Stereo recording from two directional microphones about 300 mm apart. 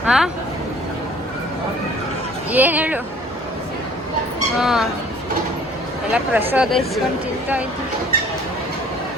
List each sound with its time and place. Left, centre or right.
0.0 s speech: centre
2.5 s speech: centre
4.5 s speech: centre
6.1 s speech: centre